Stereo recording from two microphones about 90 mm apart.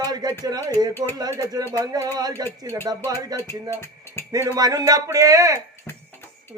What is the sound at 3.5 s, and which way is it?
Speech, 25° left (ahead or behind).